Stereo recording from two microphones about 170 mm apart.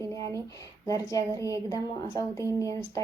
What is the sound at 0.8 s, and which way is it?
A woman's voice, 20° left (ahead or behind).